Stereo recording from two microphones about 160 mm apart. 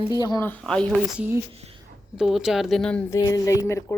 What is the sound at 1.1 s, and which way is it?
Speech, 10° right (ahead or behind).